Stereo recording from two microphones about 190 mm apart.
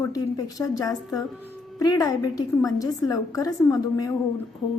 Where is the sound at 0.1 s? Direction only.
20° left (ahead or behind).